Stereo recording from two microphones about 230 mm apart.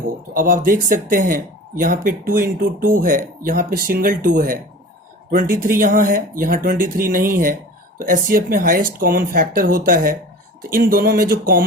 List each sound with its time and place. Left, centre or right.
0.3 s speech: right